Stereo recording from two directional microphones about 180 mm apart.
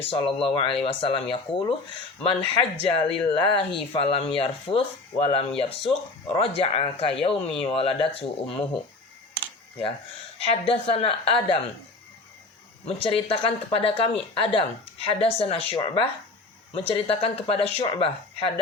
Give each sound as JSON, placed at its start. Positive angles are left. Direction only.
{"t": 0.1, "sound": "speech", "side_deg": 30}
{"t": 10.4, "sound": "speech", "side_deg": 35}
{"t": 12.8, "sound": "speech", "side_deg": 30}